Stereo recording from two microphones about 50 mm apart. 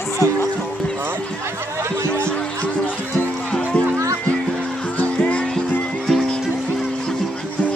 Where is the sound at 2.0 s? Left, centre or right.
Right.